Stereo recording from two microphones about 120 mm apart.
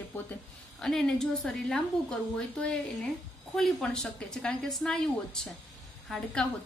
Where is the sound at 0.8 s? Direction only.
5° left (ahead or behind).